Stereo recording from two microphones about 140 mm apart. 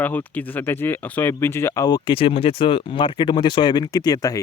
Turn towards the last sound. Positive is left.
turn(degrees=25)  # may be behind; listen again after turning